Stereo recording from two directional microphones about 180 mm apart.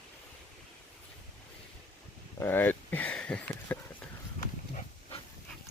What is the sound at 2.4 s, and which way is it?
Speech, 10° left (ahead or behind).